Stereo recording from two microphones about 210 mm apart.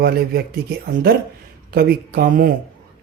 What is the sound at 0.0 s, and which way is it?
Speech, 50° right (ahead or behind).